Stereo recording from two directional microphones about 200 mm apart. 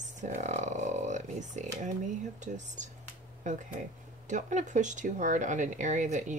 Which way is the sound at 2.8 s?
35° right (ahead or behind).